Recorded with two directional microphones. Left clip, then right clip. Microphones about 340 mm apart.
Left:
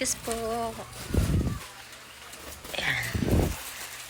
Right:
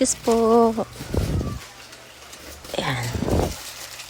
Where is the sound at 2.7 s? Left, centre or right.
Centre.